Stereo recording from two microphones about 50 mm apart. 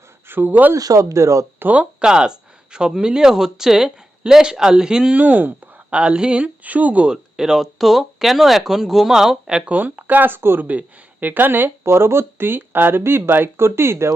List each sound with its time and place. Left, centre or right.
0.3 s speech: right
0.7 s speech: right
1.7 s speech: right
5.1 s speech: right
5.9 s speech: right
7.1 s speech: centre
9.6 s speech: right
10.7 s speech: right
11.8 s speech: right